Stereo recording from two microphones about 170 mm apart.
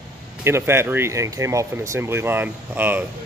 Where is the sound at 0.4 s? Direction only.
15° right (ahead or behind).